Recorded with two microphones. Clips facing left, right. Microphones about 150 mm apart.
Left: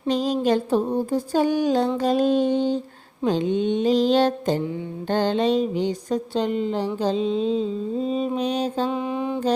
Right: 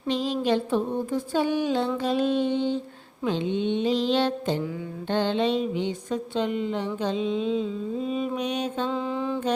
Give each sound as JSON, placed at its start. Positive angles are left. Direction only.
{"t": 0.1, "sound": "mantra", "side_deg": 40}
{"t": 3.2, "sound": "a sound", "side_deg": 45}
{"t": 5.0, "sound": "mantra", "side_deg": 40}
{"t": 8.9, "sound": "mantra", "side_deg": 15}